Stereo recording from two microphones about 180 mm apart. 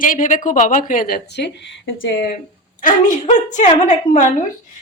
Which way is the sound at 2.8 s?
45° left (ahead or behind).